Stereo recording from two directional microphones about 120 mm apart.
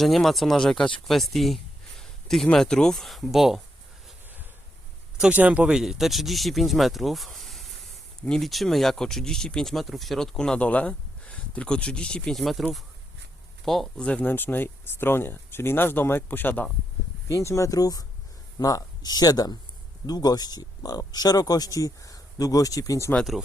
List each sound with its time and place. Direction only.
0.0 s speech: centre (ahead or behind)
5.2 s speech: 10° right (ahead or behind)
13.7 s speech: centre (ahead or behind)
17.2 s speech: 25° left (ahead or behind)
23.1 s speech: centre (ahead or behind)